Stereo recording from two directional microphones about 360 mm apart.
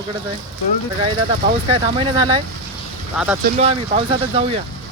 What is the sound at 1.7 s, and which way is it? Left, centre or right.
Speech, centre.